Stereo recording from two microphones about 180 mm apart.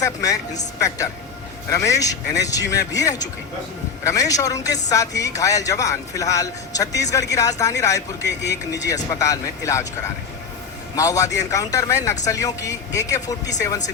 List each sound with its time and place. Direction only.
0.0 s a man's voice: 20° left (ahead or behind)
10.9 s a man's voice: 20° left (ahead or behind)